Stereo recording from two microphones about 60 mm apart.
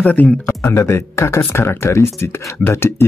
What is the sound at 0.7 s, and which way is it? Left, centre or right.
Speech, left.